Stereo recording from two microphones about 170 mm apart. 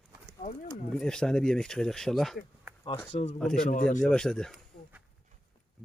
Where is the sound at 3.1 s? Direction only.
35° left (ahead or behind).